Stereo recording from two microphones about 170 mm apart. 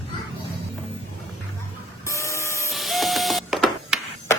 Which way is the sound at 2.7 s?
Centre (ahead or behind).